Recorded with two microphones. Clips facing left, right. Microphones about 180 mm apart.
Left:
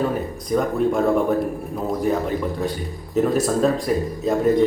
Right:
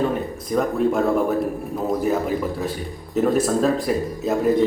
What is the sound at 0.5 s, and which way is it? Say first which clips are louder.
Speech: even; centre (ahead or behind).